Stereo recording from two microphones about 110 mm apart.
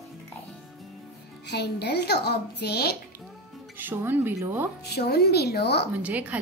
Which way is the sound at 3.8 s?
15° right (ahead or behind).